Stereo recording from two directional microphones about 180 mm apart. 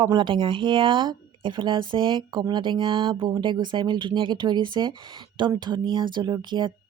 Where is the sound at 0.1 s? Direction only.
25° right (ahead or behind).